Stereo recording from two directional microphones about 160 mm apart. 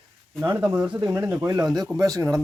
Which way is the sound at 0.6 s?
10° right (ahead or behind).